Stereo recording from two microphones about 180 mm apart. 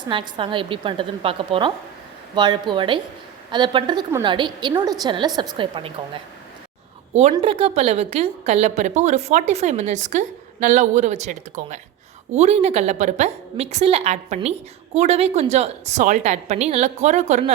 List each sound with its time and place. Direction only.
0.0 s a woman's voice: 25° right (ahead or behind)
7.1 s a woman's voice: 40° right (ahead or behind)